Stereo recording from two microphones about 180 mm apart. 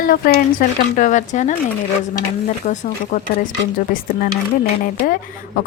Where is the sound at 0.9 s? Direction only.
45° left (ahead or behind).